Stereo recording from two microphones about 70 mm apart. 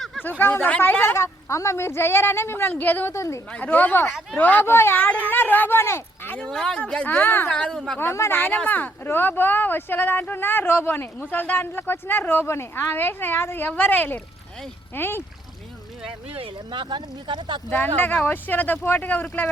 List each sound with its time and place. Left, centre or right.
0.2 s speech: left
1.1 s speech: left
2.7 s speech: left
3.1 s a woman's voice: left
3.5 s speech: left
4.6 s speech: left
4.9 s speech: left
6.3 s speech: centre; by 7.5 s left
7.5 s a woman's voice: centre
8.1 s a woman's voice: left
8.5 s speech: left
17.7 s speech: left